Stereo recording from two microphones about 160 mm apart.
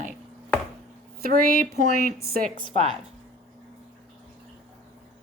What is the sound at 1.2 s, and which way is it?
A woman's voice, 60° right (ahead or behind).